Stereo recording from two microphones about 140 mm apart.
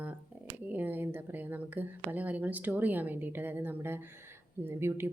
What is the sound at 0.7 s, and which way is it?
A woman's voice, 15° right (ahead or behind).